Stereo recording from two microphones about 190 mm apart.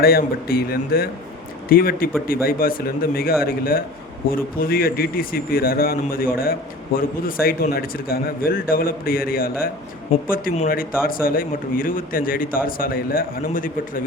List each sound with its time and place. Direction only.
0.0 s a man's voice: 50° left (ahead or behind)